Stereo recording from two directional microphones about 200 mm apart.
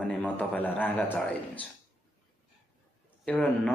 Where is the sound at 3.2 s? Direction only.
5° left (ahead or behind).